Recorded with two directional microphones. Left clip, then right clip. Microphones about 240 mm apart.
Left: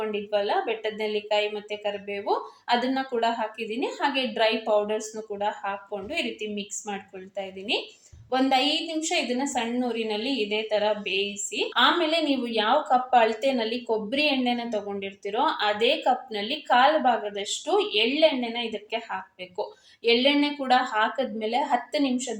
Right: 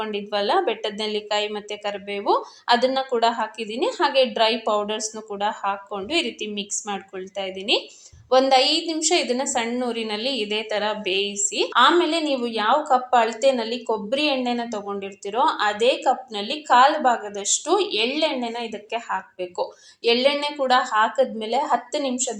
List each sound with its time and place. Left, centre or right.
0.0 s speech: right